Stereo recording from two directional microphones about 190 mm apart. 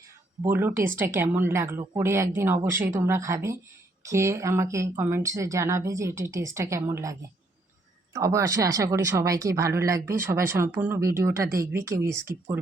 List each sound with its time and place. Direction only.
0.4 s a woman's voice: 10° right (ahead or behind)